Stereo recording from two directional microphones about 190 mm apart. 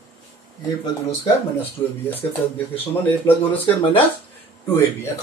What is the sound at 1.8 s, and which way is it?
Speech, 20° left (ahead or behind).